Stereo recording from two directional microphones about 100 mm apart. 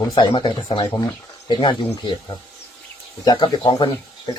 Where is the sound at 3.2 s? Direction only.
55° left (ahead or behind).